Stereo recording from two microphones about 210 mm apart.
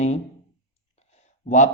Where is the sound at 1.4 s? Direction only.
35° left (ahead or behind).